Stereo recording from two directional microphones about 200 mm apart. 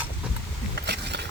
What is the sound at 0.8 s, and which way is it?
Bee, 55° right (ahead or behind).